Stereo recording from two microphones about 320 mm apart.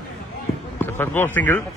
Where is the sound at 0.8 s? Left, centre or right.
Centre.